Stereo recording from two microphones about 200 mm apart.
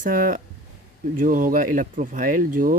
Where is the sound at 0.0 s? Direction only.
45° right (ahead or behind).